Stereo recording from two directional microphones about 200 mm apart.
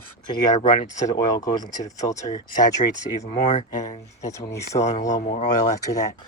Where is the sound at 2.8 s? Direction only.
35° left (ahead or behind).